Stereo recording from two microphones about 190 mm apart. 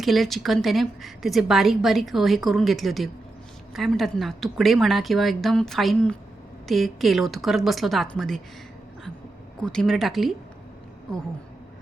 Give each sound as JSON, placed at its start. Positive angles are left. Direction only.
{"t": 0.0, "sound": "a woman's voice", "side_deg": 0}
{"t": 9.6, "sound": "a woman's voice", "side_deg": 5}